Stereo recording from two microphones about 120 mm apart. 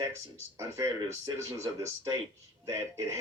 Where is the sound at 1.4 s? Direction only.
25° right (ahead or behind).